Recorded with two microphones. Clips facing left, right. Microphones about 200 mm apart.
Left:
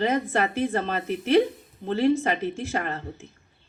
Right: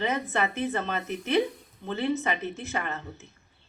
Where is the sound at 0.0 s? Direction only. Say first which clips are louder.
Left 4 dB; 35° left (ahead or behind).